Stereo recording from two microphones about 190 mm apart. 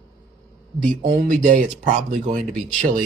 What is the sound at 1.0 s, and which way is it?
Speech, 50° right (ahead or behind).